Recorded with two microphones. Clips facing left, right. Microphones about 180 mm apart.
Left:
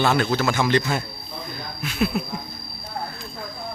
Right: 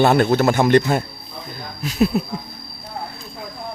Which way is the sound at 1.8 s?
40° right (ahead or behind).